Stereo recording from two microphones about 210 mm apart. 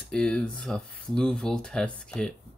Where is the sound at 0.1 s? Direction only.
5° left (ahead or behind).